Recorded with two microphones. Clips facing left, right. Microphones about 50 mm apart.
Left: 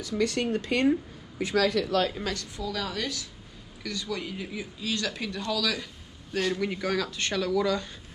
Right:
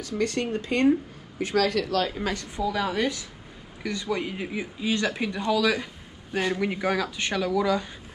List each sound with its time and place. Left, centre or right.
0.0 s speech: right
2.0 s speech: centre
2.3 s speech: right